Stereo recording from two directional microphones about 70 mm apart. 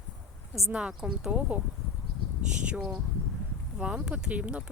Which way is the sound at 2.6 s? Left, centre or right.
Centre.